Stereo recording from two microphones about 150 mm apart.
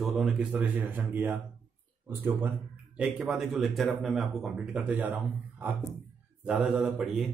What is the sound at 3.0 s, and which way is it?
A man's voice, 5° right (ahead or behind).